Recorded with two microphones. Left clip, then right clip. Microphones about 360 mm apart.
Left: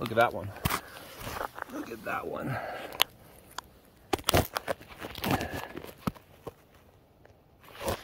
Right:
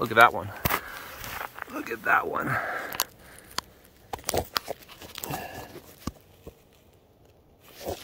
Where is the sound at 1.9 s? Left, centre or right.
Right.